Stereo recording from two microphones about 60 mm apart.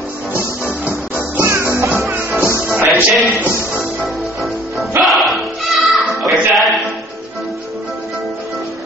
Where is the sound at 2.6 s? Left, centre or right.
Right.